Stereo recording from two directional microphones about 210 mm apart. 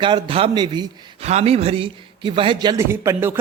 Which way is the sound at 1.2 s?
30° right (ahead or behind).